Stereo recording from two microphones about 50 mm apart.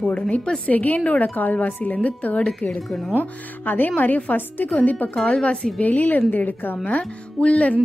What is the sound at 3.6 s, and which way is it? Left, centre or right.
A woman's voice, left.